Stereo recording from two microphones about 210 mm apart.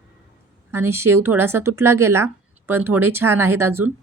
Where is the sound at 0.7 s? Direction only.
10° right (ahead or behind).